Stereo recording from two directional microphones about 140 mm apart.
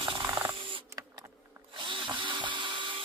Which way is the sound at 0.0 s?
35° right (ahead or behind).